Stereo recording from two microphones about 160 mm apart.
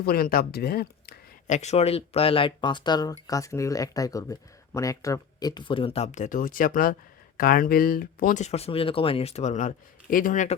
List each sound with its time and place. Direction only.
0.0 s speech: 70° left (ahead or behind)
1.5 s speech: 45° left (ahead or behind); by 8.4 s 65° left (ahead or behind)
8.4 s speech: 40° left (ahead or behind)